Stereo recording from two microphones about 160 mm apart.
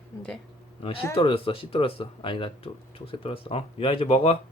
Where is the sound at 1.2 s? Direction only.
35° left (ahead or behind).